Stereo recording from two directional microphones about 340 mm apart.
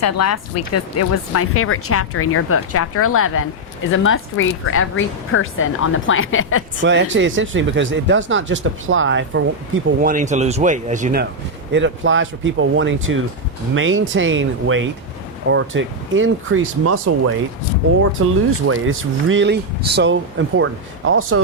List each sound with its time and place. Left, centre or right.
0.0 s speech: left
6.8 s speech: right
18.6 s speech: right